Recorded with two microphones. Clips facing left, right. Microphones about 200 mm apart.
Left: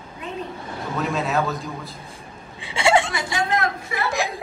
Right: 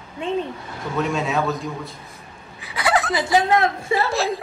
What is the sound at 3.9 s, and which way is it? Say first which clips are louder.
Speech: right 7 dB; 30° right (ahead or behind).